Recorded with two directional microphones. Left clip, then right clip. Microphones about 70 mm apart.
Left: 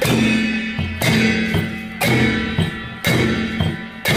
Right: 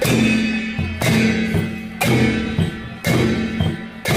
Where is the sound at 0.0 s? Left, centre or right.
Centre.